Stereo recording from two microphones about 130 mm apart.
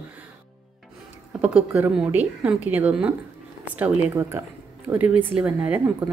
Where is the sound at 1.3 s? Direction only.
10° right (ahead or behind).